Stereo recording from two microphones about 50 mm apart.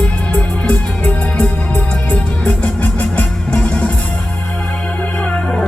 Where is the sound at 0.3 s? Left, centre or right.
Left.